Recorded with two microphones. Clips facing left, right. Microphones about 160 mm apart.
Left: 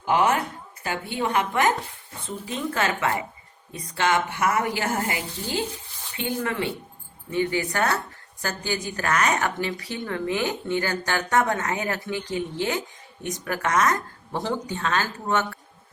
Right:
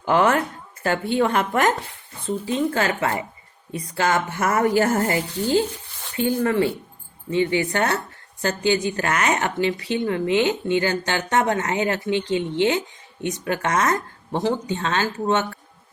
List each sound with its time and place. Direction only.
0.1 s speech: 50° right (ahead or behind)
2.2 s speech: 30° right (ahead or behind)
7.3 s a woman's voice: 20° right (ahead or behind)